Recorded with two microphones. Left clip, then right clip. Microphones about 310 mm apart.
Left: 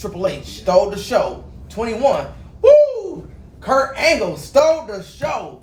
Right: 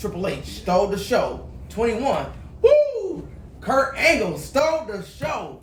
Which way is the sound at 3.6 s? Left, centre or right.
Centre.